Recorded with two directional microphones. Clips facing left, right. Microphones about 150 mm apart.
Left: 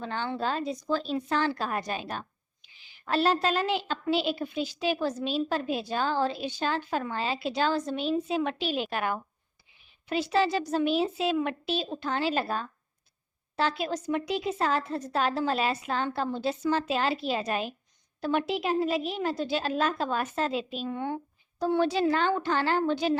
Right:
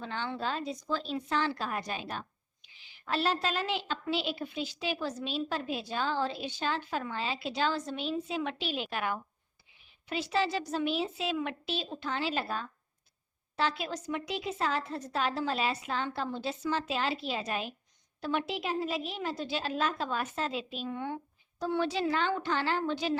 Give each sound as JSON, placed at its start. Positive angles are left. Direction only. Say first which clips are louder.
{"t": 0.0, "sound": "a woman's voice", "louder": "left 4 dB", "side_deg": 45}